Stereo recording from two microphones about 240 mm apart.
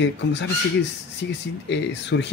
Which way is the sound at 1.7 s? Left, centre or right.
Left.